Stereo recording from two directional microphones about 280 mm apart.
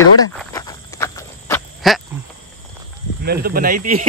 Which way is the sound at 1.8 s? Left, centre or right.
Centre.